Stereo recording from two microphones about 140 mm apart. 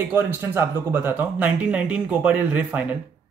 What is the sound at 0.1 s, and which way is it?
Speech, 15° right (ahead or behind).